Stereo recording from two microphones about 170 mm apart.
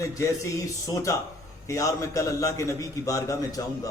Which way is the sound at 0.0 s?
15° left (ahead or behind).